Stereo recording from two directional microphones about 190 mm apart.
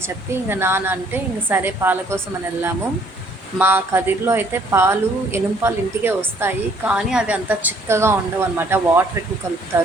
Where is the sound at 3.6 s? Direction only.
10° right (ahead or behind).